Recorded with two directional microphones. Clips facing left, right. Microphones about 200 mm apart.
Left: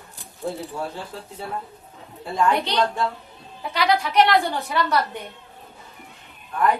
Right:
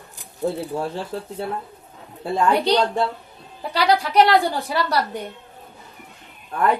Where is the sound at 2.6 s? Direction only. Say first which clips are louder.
Right 4 dB; 35° right (ahead or behind).